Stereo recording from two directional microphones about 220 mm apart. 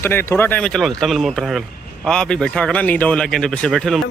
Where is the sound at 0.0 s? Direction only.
10° left (ahead or behind).